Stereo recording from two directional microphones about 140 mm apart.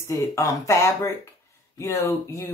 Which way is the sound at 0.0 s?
20° left (ahead or behind).